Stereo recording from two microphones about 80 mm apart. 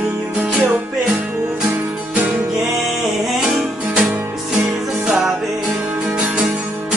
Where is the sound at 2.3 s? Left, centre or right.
Right.